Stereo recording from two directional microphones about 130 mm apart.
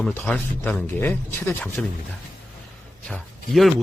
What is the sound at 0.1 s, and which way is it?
Speech, 10° left (ahead or behind).